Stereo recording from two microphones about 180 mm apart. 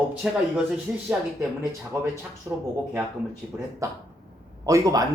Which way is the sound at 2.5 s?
15° right (ahead or behind).